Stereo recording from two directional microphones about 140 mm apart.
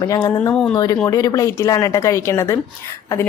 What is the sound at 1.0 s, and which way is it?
Speech, 25° left (ahead or behind).